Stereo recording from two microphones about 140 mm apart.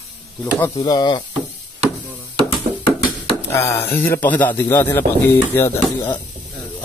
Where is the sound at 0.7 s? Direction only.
35° left (ahead or behind).